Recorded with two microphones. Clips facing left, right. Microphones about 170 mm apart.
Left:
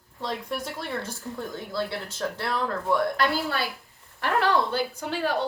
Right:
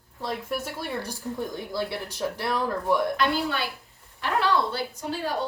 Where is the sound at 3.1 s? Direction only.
40° left (ahead or behind).